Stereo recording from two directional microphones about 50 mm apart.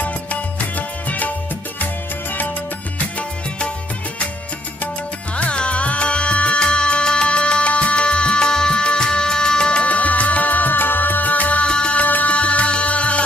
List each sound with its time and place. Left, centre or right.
0.0 s music: left
3.2 s music: left
5.3 s music: left
12.0 s music: left